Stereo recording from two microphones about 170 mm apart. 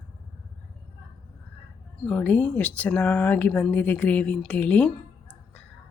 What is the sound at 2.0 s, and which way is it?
Speech, 10° left (ahead or behind).